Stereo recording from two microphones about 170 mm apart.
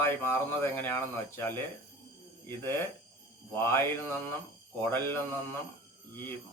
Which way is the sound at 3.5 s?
15° left (ahead or behind).